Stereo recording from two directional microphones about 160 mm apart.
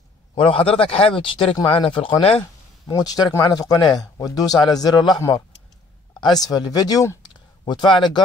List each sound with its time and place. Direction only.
0.3 s speech: 35° left (ahead or behind)
2.9 s speech: 25° left (ahead or behind)
6.4 s speech: 25° left (ahead or behind)